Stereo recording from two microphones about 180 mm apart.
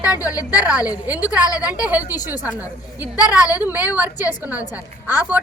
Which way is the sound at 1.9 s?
10° right (ahead or behind).